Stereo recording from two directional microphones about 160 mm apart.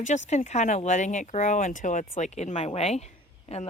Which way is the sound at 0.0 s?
45° left (ahead or behind).